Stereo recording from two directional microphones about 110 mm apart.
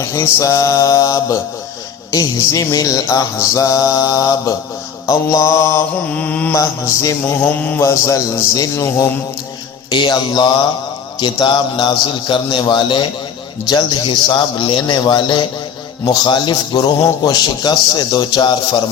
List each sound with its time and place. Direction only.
0.0 s mantra: 30° left (ahead or behind)
5.0 s speech: 30° left (ahead or behind)
6.1 s mantra: 15° left (ahead or behind)
6.5 s speech: 30° left (ahead or behind)
7.4 s speech: 15° left (ahead or behind)
9.9 s a man's voice: 45° left (ahead or behind)
16.0 s mantra: 40° left (ahead or behind)